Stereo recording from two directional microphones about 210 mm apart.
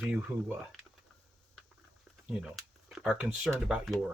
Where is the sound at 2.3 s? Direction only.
Centre (ahead or behind).